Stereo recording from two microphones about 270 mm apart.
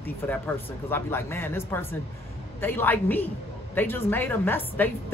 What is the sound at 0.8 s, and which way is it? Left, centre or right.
A man's voice, centre.